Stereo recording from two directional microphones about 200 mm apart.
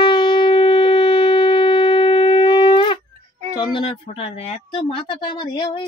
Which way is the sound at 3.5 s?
25° left (ahead or behind).